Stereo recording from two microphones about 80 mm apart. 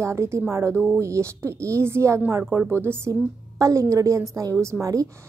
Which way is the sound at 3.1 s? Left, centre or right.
Right.